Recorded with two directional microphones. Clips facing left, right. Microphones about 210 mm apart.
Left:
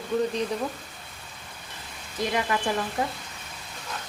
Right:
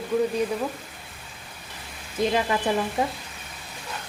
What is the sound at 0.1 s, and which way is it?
Speech, 10° right (ahead or behind).